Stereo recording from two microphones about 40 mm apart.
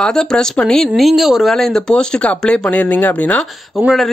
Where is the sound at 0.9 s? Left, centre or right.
Centre.